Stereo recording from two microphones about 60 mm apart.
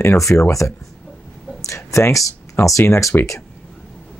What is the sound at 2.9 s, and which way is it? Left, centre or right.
Speech, left.